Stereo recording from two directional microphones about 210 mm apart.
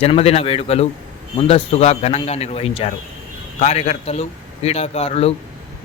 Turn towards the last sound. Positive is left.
turn(degrees=30)  # may be behind; listen again after turning